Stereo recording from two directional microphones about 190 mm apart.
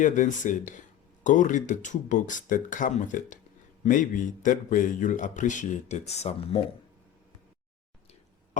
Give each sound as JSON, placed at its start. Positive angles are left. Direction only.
{"t": 0.0, "sound": "speech", "side_deg": 40}